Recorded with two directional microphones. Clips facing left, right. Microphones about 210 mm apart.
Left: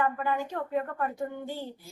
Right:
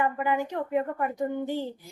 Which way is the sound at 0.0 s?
15° right (ahead or behind).